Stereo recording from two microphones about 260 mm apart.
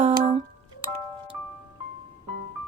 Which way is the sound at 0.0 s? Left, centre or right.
Right.